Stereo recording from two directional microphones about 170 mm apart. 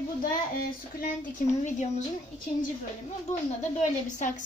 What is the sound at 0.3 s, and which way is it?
A woman's voice, 55° left (ahead or behind).